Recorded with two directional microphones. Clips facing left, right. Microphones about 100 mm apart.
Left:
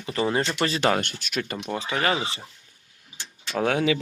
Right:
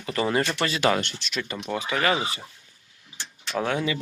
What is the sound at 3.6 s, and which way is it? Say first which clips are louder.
Speech: left 3 dB; 55° left (ahead or behind).